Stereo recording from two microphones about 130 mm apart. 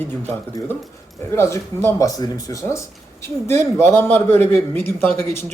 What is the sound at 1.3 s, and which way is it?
A man's voice, 20° left (ahead or behind).